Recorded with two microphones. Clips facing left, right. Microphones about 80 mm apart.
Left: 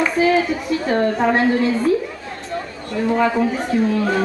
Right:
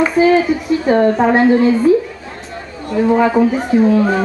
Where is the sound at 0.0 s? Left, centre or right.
Centre.